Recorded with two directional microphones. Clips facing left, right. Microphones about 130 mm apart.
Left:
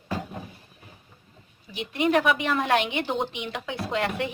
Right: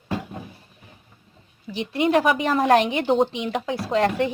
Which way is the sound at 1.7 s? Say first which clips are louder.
Right 3 dB; 30° right (ahead or behind).